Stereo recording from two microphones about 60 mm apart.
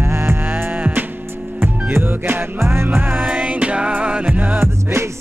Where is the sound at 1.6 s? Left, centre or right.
Right.